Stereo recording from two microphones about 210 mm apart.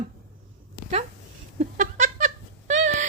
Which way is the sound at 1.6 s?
35° right (ahead or behind).